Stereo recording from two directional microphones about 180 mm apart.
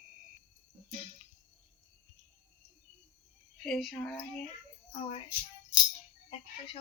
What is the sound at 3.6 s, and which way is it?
Speech, 5° left (ahead or behind).